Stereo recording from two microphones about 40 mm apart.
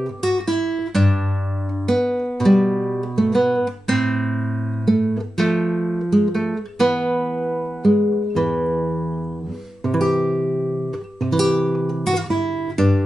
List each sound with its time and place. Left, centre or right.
0.0 s music: centre
2.6 s music: centre
3.2 s guitar: centre
9.8 s music: centre